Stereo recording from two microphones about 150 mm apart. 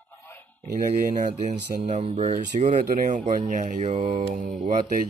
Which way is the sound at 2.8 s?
60° right (ahead or behind).